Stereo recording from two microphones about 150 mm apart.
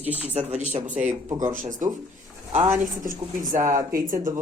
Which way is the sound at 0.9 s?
10° right (ahead or behind).